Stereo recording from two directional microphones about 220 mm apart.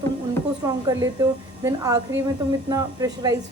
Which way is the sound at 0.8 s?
15° right (ahead or behind).